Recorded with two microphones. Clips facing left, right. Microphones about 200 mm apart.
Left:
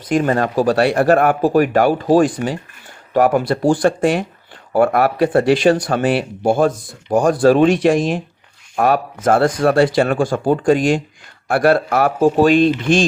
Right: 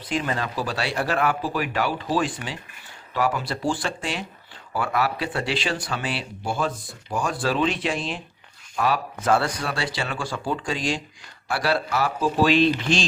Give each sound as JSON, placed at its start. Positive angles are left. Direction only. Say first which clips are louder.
{"t": 0.1, "sound": "speech", "louder": "left 10 dB", "side_deg": 50}